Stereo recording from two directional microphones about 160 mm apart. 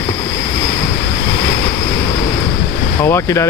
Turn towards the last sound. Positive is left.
turn(degrees=15)  # may be behind; listen again after turning